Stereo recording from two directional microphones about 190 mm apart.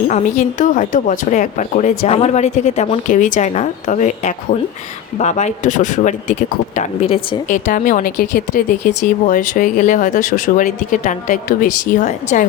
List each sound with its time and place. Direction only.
0.1 s speech: 40° left (ahead or behind)